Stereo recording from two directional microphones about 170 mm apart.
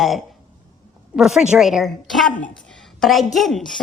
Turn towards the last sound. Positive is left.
turn(degrees=0)  # may be behind; listen again after turning